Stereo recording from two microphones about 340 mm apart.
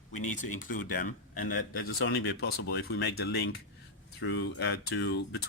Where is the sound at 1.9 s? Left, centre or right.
Left.